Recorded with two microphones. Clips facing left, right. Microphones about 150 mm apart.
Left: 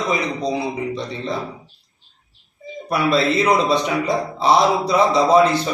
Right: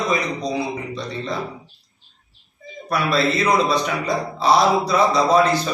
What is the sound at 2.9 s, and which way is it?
A man's voice, 20° left (ahead or behind).